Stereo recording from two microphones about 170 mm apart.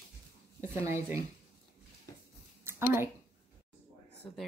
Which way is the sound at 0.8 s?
15° right (ahead or behind).